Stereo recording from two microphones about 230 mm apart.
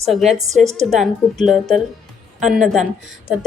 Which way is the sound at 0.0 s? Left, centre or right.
Centre.